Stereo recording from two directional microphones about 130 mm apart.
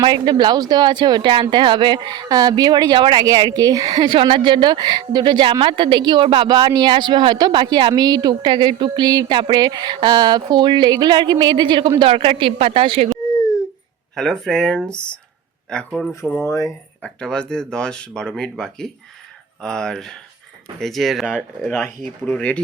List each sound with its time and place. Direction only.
0.0 s speech: 35° right (ahead or behind)
14.2 s speech: 5° left (ahead or behind)
16.5 s speech: 25° left (ahead or behind)
17.0 s speech: 5° left (ahead or behind)